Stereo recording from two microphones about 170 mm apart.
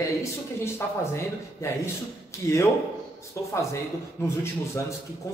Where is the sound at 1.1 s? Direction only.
15° left (ahead or behind).